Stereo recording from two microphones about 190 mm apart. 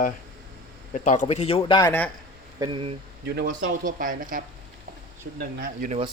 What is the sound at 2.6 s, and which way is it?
Speech, 30° right (ahead or behind).